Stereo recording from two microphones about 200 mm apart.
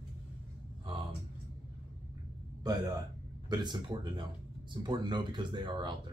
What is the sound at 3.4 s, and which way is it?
Speech, 20° right (ahead or behind).